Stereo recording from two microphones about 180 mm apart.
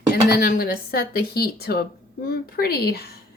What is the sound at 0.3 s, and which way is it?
Speech, 55° left (ahead or behind).